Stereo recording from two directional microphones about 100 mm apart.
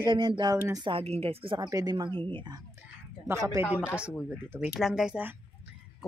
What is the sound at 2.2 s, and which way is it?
Speech, 55° right (ahead or behind).